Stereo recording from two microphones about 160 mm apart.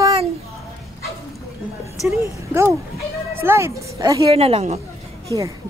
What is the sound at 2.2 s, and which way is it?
Speech, 15° right (ahead or behind).